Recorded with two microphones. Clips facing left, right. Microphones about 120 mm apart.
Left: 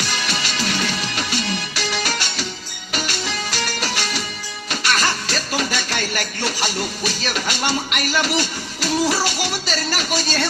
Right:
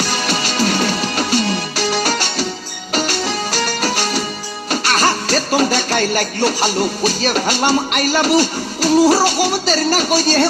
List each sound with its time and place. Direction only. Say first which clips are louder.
0.0 s music: right 6 dB; 40° right (ahead or behind)